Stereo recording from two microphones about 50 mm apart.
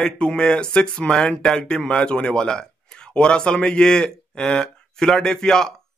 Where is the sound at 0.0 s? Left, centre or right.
Centre.